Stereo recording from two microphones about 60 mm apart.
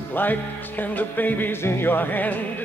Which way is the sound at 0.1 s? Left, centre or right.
Left.